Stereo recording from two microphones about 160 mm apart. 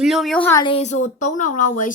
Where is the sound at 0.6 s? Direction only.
40° left (ahead or behind).